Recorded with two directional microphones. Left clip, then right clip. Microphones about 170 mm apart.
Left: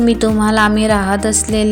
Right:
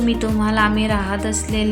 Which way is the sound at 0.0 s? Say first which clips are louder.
Left 7 dB; 35° left (ahead or behind).